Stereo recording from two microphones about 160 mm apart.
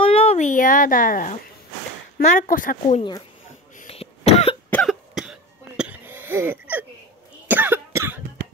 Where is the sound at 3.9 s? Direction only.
40° left (ahead or behind).